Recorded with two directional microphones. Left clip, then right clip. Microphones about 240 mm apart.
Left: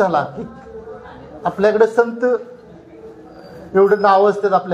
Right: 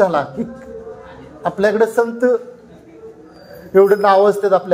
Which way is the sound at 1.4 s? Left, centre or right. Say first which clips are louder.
Left 1 dB; right.